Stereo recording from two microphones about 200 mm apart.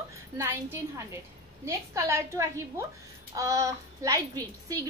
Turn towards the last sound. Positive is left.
turn(degrees=-20)  # may be behind; listen again after turning